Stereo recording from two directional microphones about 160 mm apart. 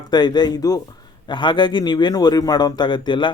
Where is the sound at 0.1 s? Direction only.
25° left (ahead or behind).